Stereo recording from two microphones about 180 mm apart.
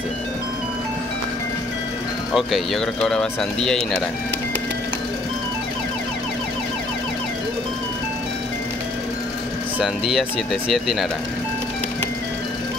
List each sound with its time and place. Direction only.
2.3 s speech: centre (ahead or behind)
9.8 s speech: centre (ahead or behind)